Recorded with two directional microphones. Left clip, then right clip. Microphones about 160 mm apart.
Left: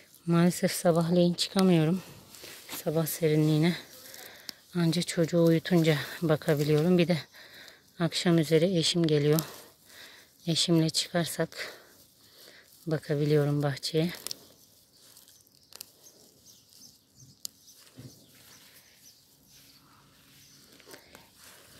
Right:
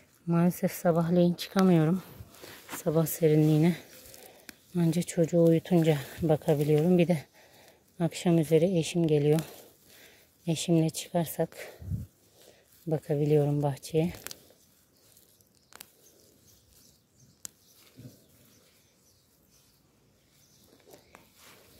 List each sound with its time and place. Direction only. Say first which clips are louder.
0.3 s speech: left 2 dB; centre (ahead or behind)
2.4 s a sound: left 1 dB; 25° right (ahead or behind)
2.8 s speech: right 2 dB; 30° right (ahead or behind)
3.3 s speech: right 1 dB; 20° right (ahead or behind)
12.8 s speech: right 1 dB; 10° right (ahead or behind)
20.9 s a sound: left 4 dB; 10° right (ahead or behind)